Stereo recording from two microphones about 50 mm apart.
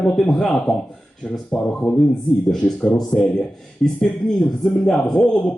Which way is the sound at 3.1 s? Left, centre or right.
Centre.